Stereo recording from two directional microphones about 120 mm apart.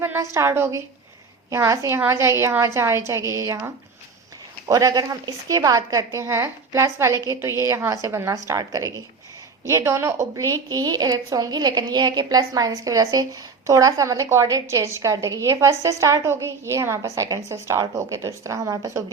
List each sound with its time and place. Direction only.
0.0 s a sound: 20° right (ahead or behind)
0.3 s a woman's voice: 20° right (ahead or behind)
4.7 s a woman's voice: 30° right (ahead or behind)